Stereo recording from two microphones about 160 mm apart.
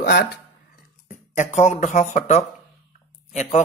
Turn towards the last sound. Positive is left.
turn(degrees=45)  # may be behind; listen again after turning